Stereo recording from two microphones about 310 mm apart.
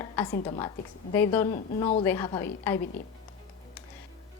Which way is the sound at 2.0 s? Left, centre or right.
Centre.